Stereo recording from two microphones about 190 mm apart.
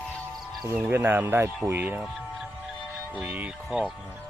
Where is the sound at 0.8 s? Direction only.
10° right (ahead or behind).